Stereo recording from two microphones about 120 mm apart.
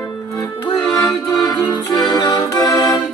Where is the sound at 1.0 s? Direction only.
30° left (ahead or behind).